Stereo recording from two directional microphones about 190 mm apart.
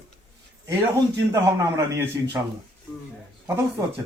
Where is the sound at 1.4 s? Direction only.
15° right (ahead or behind).